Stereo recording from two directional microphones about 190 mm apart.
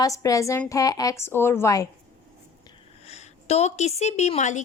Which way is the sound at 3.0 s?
35° left (ahead or behind).